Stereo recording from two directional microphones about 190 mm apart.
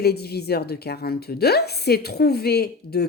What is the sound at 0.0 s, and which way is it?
A woman's voice, 55° left (ahead or behind).